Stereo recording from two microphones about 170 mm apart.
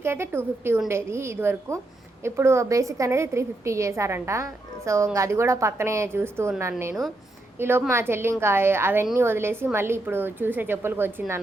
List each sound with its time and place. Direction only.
0.0 s a woman's voice: 15° right (ahead or behind)